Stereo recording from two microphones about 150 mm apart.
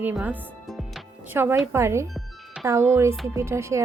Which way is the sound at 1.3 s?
15° right (ahead or behind).